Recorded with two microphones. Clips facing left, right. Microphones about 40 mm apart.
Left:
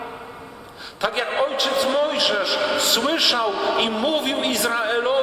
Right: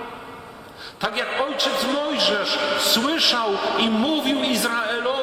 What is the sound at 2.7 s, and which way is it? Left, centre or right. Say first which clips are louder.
Speech: even; centre.